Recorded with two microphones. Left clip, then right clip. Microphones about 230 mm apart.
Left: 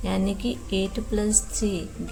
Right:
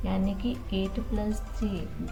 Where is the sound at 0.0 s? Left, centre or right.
Left.